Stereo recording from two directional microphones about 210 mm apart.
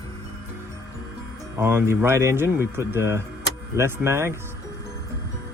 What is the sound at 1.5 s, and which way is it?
Speech, 10° right (ahead or behind).